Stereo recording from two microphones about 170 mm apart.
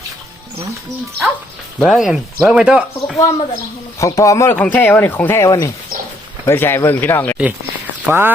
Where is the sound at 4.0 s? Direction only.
20° left (ahead or behind).